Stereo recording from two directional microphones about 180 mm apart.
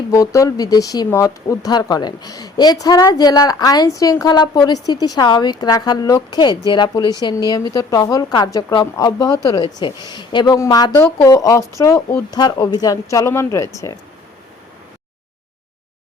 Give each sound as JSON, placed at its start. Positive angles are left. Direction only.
{"t": 0.1, "sound": "speech", "side_deg": 20}